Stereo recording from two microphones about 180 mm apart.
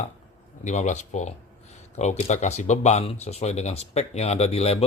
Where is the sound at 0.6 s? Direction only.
40° left (ahead or behind).